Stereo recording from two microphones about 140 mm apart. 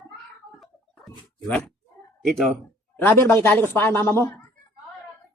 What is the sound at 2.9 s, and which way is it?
A man's voice, 15° left (ahead or behind).